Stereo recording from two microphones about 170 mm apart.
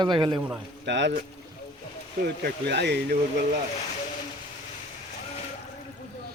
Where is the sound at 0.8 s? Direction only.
90° right.